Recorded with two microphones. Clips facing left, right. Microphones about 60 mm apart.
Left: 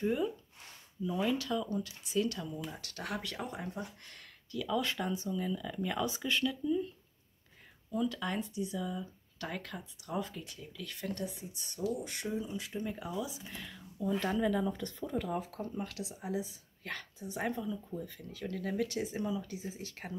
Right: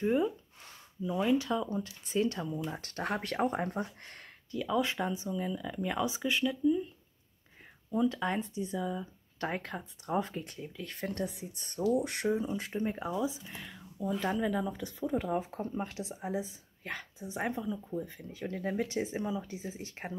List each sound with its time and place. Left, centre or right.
1.0 s speech: centre
7.9 s speech: right
13.5 s a sound: centre
14.2 s speech: centre
15.1 s speech: right